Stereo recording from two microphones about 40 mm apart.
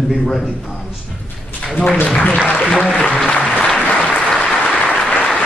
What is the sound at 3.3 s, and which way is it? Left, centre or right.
Applause, left.